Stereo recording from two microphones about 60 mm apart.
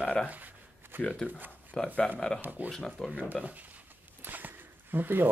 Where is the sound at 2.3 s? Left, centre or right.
Right.